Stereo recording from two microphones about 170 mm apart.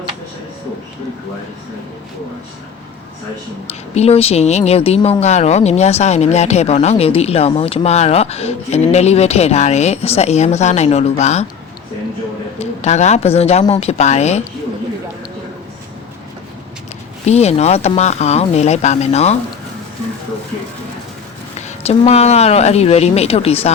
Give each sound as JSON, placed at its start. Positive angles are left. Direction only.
{"t": 3.7, "sound": "speech", "side_deg": 40}
{"t": 12.5, "sound": "speech", "side_deg": 40}
{"t": 17.2, "sound": "speech", "side_deg": 40}
{"t": 21.7, "sound": "speech", "side_deg": 40}